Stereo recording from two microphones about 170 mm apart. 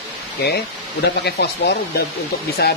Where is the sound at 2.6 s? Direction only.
65° left (ahead or behind).